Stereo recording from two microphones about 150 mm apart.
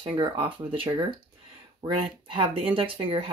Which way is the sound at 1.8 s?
35° right (ahead or behind).